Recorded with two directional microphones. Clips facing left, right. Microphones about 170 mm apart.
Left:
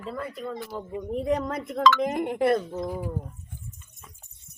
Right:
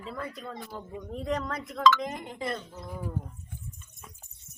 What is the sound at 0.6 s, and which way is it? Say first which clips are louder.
Speech: left 6 dB; 90° left.